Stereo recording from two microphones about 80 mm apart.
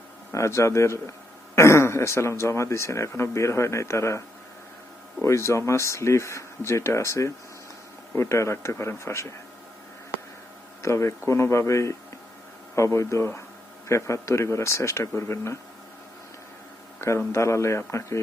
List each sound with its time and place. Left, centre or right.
0.3 s speech: left
5.2 s speech: left
10.8 s speech: left
17.0 s speech: left